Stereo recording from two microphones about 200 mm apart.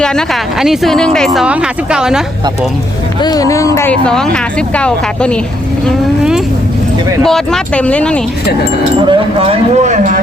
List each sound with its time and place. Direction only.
0.0 s speech: 5° left (ahead or behind)
3.2 s speech: 20° left (ahead or behind)
9.0 s speech: 25° right (ahead or behind)